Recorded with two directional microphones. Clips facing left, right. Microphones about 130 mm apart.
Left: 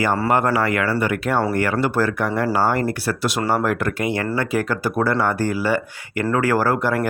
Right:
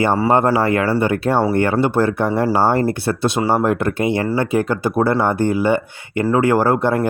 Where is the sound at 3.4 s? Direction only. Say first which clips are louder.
Right 3 dB; 10° right (ahead or behind).